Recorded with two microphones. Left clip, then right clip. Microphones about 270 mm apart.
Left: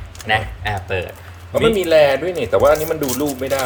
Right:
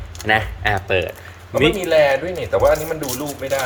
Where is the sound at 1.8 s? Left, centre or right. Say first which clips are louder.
Left 4 dB; left.